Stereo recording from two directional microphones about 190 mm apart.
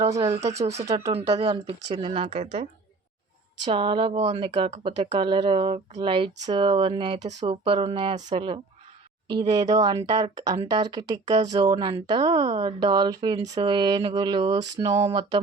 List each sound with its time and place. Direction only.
0.0 s speech: 15° right (ahead or behind)
1.4 s speech: 30° right (ahead or behind)
3.6 s speech: 25° right (ahead or behind)